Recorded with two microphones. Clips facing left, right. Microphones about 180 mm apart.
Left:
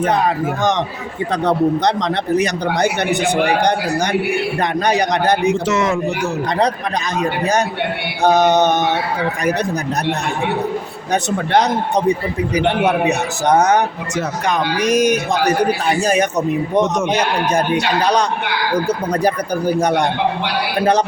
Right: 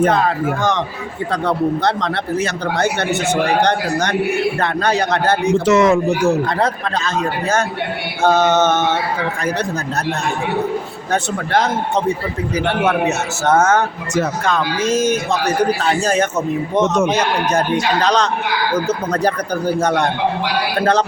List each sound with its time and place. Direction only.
0.1 s speech: 20° left (ahead or behind)
5.6 s speech: 50° right (ahead or behind)
6.6 s speech: 15° left (ahead or behind)
11.1 s speech: 15° left (ahead or behind)